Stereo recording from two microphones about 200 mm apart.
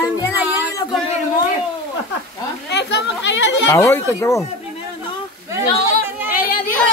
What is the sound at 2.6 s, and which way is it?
Chatter, 55° left (ahead or behind).